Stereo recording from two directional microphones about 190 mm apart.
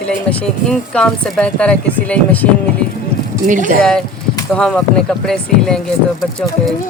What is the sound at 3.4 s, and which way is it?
Speech, 45° right (ahead or behind).